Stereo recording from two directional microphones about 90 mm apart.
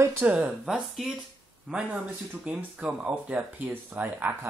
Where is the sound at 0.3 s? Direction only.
10° right (ahead or behind).